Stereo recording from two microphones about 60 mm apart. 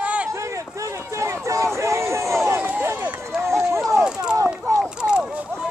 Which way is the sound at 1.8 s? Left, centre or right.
Right.